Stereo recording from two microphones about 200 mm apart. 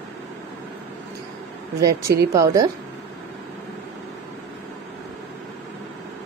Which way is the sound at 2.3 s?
15° right (ahead or behind).